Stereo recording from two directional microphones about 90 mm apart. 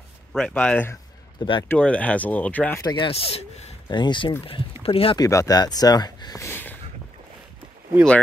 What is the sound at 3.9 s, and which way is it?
Speech, 60° left (ahead or behind).